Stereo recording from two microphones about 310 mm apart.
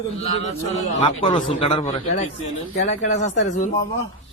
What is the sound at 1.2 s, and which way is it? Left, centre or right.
Speech, centre.